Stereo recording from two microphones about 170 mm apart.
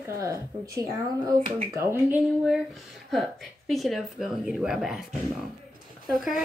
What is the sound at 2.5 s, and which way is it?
A woman's voice, centre (ahead or behind).